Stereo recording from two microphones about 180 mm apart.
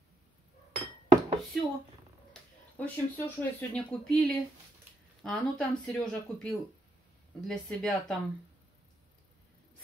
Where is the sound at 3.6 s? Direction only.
10° left (ahead or behind).